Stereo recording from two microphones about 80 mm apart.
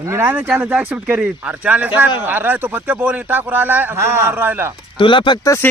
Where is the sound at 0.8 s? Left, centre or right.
Centre.